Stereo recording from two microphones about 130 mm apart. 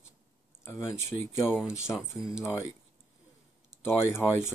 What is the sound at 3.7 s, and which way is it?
Speech, 20° left (ahead or behind).